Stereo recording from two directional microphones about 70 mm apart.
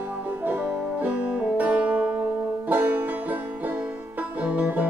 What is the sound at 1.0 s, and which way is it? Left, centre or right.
Music, centre.